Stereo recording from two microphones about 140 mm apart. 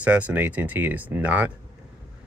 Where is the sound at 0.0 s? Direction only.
10° right (ahead or behind).